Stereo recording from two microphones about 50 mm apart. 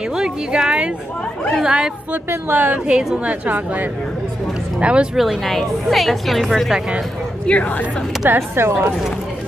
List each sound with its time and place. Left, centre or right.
0.1 s speech: centre
2.5 s a woman's voice: right
4.7 s speech: right
5.1 s a woman's voice: centre
5.4 s a woman's voice: centre
7.4 s a woman's voice: left
8.3 s speech: right